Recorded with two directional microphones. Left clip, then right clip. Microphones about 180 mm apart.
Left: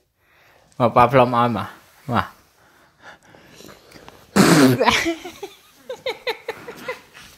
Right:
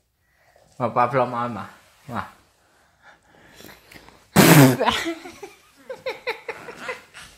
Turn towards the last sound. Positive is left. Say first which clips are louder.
# left 3 dB
turn(degrees=30)  # may be behind; listen again after turning